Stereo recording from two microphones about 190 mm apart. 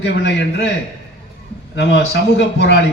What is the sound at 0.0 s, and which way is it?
Speech, 65° left (ahead or behind).